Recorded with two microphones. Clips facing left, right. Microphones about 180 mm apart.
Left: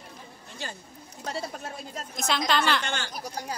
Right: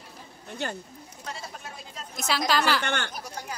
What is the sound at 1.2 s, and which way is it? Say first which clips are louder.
Speech: left 6 dB; 40° left (ahead or behind).